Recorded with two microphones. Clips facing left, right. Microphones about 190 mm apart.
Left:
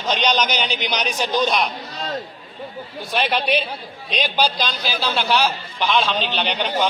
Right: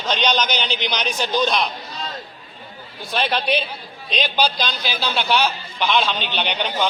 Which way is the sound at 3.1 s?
5° left (ahead or behind).